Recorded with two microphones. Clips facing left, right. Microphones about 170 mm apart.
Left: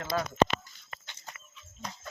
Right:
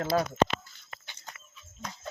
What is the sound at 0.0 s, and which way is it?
Speech, 30° right (ahead or behind).